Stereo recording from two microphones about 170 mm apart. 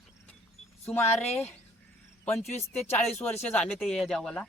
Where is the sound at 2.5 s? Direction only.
40° left (ahead or behind).